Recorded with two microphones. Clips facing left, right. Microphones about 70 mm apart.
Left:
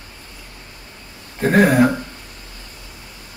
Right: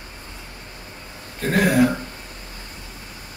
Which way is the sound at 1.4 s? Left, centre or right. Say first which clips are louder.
Left 4 dB; left.